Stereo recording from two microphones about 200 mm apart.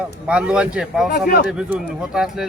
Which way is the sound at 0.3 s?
5° right (ahead or behind).